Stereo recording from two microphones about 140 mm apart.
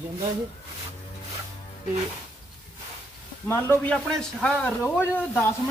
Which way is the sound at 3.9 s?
5° left (ahead or behind).